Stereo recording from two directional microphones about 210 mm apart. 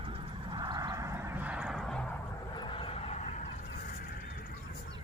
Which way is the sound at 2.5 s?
25° left (ahead or behind).